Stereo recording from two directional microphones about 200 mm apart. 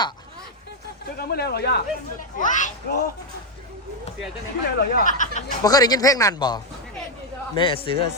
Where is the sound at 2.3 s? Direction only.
40° left (ahead or behind).